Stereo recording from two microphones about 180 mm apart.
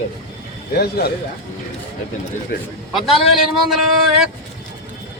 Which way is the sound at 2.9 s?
Centre (ahead or behind).